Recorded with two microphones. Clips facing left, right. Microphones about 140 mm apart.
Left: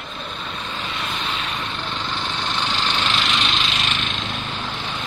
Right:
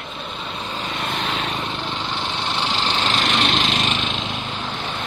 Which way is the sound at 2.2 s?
25° right (ahead or behind).